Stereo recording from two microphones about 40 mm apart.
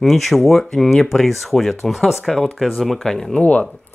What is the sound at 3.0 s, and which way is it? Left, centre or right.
Speech, centre.